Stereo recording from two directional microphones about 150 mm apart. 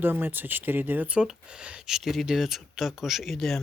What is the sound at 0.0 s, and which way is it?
Speech, 15° right (ahead or behind).